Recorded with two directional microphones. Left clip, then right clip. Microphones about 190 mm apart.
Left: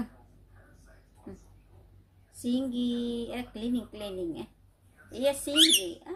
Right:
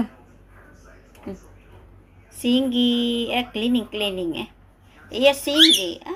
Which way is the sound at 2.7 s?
30° right (ahead or behind).